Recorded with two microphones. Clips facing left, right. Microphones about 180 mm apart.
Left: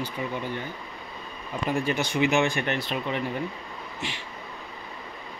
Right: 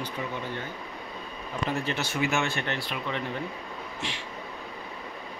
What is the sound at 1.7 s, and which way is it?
Speech, 15° left (ahead or behind).